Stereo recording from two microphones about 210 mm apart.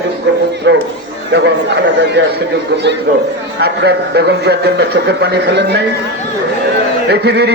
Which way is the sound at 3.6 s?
50° right (ahead or behind).